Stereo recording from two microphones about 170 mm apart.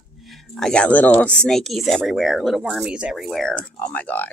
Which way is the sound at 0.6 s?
5° left (ahead or behind).